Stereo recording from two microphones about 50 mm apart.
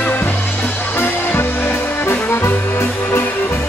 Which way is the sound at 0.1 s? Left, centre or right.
Left.